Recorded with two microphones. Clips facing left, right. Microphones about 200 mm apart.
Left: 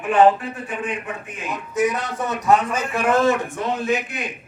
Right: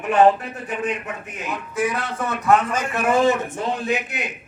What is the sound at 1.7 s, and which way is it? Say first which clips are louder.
A man's voice: left 3 dB; 20° left (ahead or behind).